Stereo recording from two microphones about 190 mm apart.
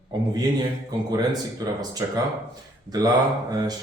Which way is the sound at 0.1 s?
20° right (ahead or behind).